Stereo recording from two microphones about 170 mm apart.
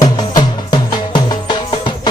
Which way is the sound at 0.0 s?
25° left (ahead or behind).